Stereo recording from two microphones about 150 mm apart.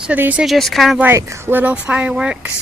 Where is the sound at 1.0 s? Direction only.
20° right (ahead or behind).